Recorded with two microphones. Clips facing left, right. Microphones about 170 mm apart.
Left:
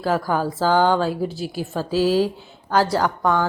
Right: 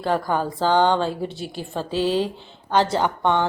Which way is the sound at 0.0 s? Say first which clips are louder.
Left 1 dB; 5° left (ahead or behind).